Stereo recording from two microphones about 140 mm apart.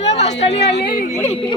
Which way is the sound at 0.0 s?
50° left (ahead or behind).